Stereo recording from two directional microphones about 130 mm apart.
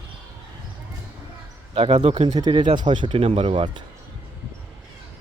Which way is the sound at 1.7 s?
55° right (ahead or behind).